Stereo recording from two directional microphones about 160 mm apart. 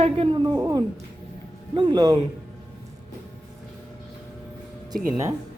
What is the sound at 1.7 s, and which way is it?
Speech, 25° right (ahead or behind).